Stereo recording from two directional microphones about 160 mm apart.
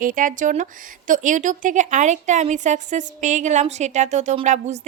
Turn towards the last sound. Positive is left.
turn(degrees=-45)  # may be behind; listen again after turning